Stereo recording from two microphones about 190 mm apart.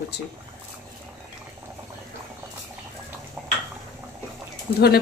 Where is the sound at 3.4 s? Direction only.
5° right (ahead or behind).